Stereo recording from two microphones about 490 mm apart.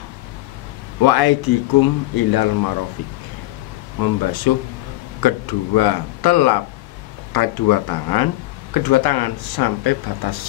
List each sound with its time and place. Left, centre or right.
1.0 s speech: left
4.0 s speech: left